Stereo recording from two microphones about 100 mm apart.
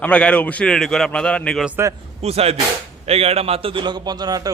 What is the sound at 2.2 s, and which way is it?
A man's voice, 90° right.